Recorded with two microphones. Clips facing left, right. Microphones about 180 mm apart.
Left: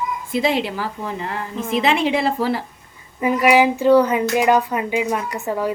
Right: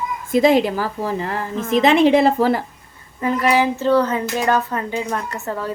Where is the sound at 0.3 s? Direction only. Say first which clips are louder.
Right 7 dB; 45° right (ahead or behind).